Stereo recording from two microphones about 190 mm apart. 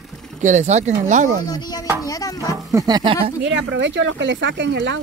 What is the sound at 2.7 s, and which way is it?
Speech, 20° right (ahead or behind).